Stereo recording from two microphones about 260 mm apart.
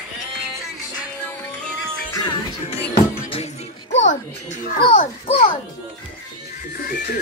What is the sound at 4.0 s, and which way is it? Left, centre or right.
Speech, left.